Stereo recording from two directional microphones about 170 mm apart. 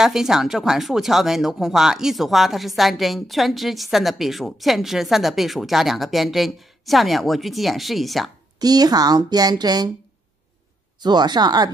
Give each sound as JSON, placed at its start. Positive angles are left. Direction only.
{"t": 0.0, "sound": "speech", "side_deg": -5}
{"t": 8.5, "sound": "speech", "side_deg": -25}
{"t": 11.0, "sound": "speech", "side_deg": -25}